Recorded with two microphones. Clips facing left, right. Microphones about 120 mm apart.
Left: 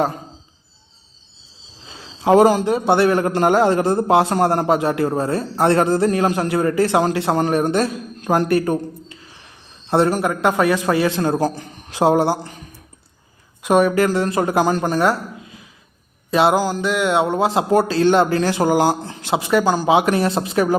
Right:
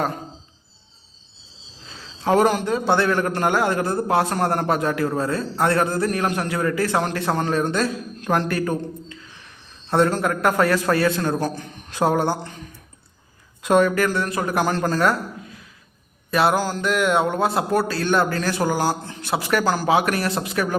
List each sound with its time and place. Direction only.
1.9 s a man's voice: 20° left (ahead or behind)
9.9 s a man's voice: 15° left (ahead or behind)
13.6 s speech: 10° left (ahead or behind)
14.1 s a man's voice: 25° left (ahead or behind)
16.3 s a man's voice: 20° left (ahead or behind)